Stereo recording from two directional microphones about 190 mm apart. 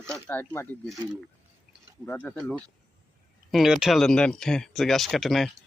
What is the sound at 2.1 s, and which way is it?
Speech, 5° left (ahead or behind).